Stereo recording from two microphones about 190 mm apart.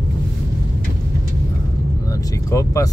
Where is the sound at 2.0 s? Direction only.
20° left (ahead or behind).